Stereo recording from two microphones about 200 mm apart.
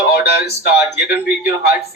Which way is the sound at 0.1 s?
55° left (ahead or behind).